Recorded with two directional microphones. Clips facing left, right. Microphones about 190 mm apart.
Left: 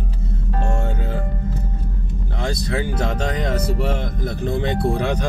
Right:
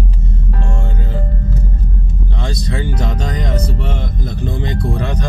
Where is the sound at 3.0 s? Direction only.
5° left (ahead or behind).